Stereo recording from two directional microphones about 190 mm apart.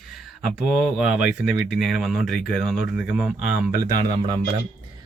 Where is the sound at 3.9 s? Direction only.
25° right (ahead or behind).